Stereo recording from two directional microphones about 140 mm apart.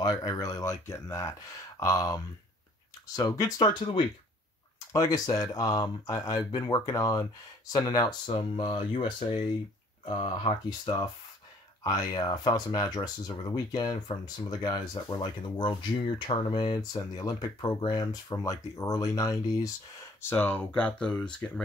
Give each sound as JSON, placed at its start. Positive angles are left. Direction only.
{"t": 0.0, "sound": "speech", "side_deg": 30}
{"t": 20.2, "sound": "speech", "side_deg": 10}